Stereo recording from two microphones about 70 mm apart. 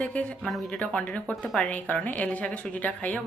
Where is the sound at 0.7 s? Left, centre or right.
Centre.